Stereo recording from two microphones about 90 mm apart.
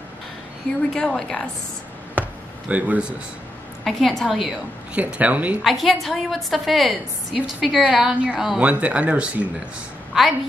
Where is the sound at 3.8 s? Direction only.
Centre (ahead or behind).